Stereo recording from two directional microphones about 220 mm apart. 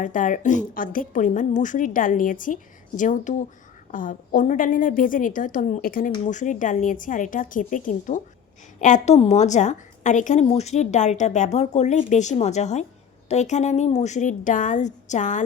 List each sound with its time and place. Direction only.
0.0 s a woman's voice: 35° left (ahead or behind)